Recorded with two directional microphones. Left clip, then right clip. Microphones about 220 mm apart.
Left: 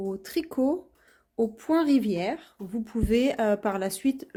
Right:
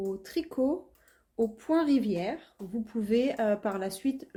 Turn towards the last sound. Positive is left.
turn(degrees=30)  # may be behind; listen again after turning